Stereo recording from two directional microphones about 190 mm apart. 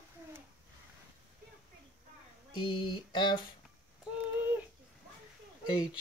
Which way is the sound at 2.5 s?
25° left (ahead or behind).